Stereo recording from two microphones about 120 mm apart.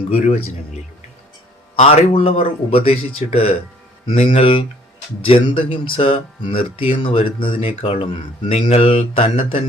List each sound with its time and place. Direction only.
0.1 s speech: 55° left (ahead or behind)
1.8 s speech: 65° left (ahead or behind)
2.1 s speech: 50° left (ahead or behind)